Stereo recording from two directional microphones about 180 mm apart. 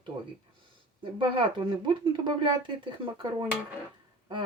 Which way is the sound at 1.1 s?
30° right (ahead or behind).